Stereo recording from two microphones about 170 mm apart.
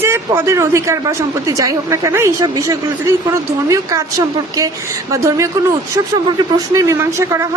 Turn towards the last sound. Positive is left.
turn(degrees=-15)  # may be behind; listen again after turning